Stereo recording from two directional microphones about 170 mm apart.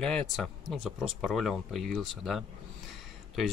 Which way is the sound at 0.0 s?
5° left (ahead or behind).